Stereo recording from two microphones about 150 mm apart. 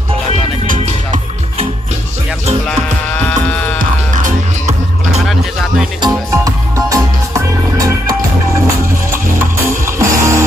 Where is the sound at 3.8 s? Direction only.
60° right (ahead or behind).